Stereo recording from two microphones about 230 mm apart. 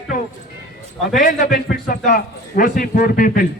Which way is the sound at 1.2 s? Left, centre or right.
Left.